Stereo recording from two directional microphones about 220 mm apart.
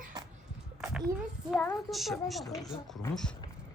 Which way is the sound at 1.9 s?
Centre (ahead or behind).